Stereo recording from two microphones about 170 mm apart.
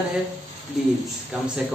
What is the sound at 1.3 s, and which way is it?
Speech, 5° right (ahead or behind).